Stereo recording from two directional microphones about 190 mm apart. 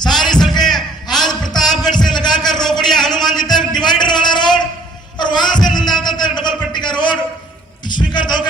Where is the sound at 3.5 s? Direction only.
20° left (ahead or behind).